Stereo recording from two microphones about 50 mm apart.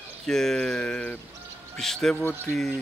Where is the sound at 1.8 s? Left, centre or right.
Centre.